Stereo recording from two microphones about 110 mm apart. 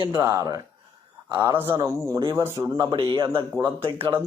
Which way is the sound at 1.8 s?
25° right (ahead or behind).